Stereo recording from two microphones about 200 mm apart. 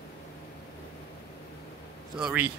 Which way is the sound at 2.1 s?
5° right (ahead or behind).